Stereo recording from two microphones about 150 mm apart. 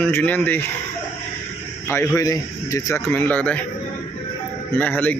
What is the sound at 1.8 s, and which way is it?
Speech, 15° left (ahead or behind).